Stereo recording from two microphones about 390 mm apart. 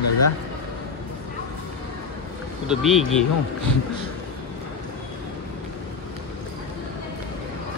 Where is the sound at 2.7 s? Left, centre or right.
Centre.